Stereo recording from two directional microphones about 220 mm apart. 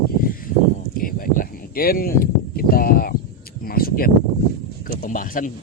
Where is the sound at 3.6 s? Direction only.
40° left (ahead or behind).